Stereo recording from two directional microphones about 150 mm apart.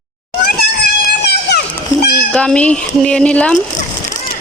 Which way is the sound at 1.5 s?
90° left.